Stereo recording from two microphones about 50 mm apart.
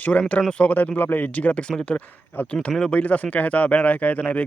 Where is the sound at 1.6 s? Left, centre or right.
Left.